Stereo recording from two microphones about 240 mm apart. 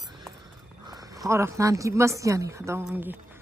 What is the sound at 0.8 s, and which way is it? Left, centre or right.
A woman's voice, centre.